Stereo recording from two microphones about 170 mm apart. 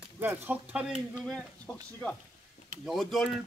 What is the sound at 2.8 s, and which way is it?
Speech, centre (ahead or behind).